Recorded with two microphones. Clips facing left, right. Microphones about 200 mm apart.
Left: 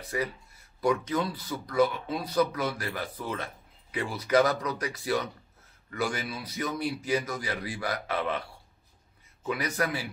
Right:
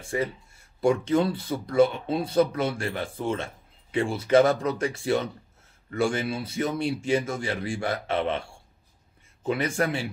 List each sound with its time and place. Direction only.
0.0 s speech: 25° right (ahead or behind)